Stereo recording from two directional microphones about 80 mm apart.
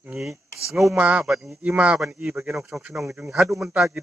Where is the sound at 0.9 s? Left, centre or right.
Centre.